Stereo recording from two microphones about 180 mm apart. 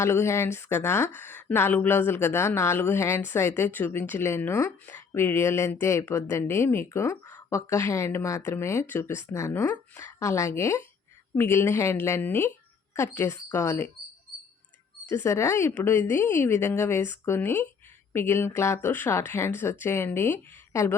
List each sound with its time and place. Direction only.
0.0 s speech: 15° left (ahead or behind)
15.1 s speech: 15° left (ahead or behind)